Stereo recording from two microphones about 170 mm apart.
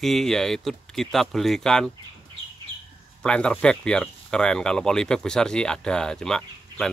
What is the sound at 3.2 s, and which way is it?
Speech, 5° left (ahead or behind).